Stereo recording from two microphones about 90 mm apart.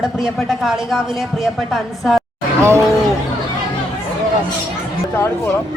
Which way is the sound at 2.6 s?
30° right (ahead or behind).